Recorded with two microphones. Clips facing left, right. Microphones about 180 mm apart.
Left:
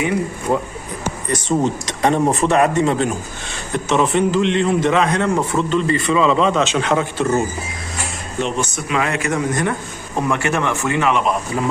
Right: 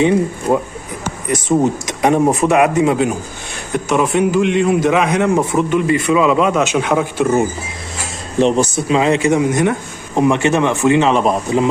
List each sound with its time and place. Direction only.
0.0 s a man's voice: 25° right (ahead or behind)
1.3 s a man's voice: 10° right (ahead or behind)
8.4 s a man's voice: 35° right (ahead or behind)
11.1 s speech: 35° right (ahead or behind)